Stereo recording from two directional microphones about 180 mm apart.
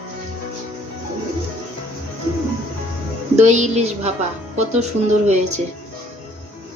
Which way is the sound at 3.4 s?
40° right (ahead or behind).